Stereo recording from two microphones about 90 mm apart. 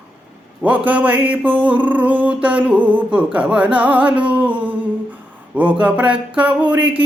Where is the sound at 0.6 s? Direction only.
15° right (ahead or behind).